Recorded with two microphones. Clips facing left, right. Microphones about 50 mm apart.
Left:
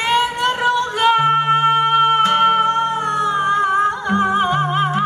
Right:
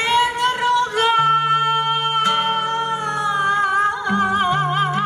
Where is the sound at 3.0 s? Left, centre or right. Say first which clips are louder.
Left 3 dB; left.